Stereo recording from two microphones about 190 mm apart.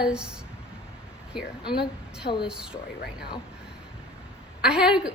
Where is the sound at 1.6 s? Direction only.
25° left (ahead or behind).